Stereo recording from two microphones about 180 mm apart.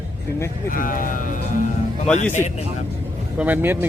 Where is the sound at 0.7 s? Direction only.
50° left (ahead or behind).